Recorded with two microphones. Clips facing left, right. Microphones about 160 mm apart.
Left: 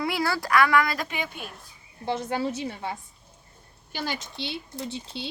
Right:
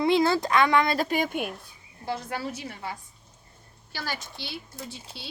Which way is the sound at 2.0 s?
25° left (ahead or behind).